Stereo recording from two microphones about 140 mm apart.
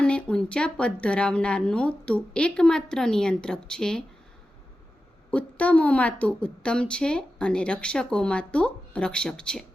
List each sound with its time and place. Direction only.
0.0 s a woman's voice: 5° left (ahead or behind)
5.3 s a woman's voice: 10° left (ahead or behind)